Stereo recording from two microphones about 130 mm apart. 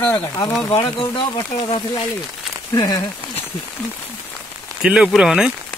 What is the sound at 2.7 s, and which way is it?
Speech, 30° left (ahead or behind).